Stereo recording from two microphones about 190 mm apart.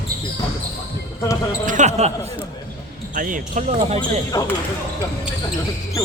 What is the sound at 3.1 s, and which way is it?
Speech, 45° right (ahead or behind).